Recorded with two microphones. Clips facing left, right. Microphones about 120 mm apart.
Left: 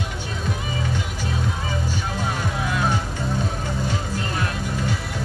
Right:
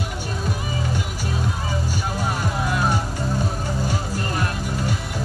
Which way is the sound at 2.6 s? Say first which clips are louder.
Right 1 dB; 5° right (ahead or behind).